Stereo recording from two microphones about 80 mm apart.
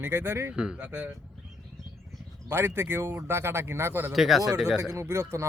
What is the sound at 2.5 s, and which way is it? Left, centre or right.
Speech, right.